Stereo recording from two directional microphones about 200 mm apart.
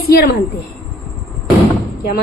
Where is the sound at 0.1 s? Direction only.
50° left (ahead or behind).